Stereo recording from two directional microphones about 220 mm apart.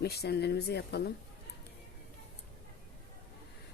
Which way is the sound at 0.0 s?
45° left (ahead or behind).